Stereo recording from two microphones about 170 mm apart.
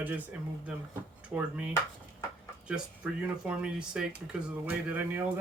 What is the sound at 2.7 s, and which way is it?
Speech, 5° right (ahead or behind).